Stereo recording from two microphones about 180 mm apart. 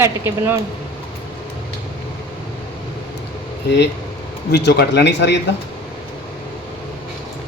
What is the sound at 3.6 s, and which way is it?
A man's voice, 70° left (ahead or behind).